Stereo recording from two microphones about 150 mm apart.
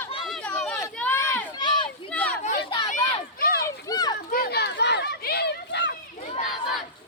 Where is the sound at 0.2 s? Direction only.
5° left (ahead or behind); by 1.9 s 30° left (ahead or behind).